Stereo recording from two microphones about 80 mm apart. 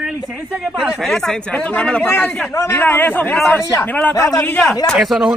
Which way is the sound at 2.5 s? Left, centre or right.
Left.